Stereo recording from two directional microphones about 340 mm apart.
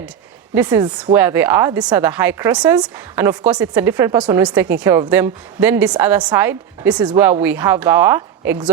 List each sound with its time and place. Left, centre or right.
0.5 s a woman's voice: centre